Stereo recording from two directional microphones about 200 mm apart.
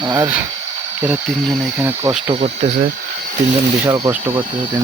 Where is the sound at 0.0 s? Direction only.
20° right (ahead or behind).